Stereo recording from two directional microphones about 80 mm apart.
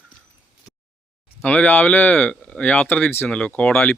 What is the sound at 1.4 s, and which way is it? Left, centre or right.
Speech, centre.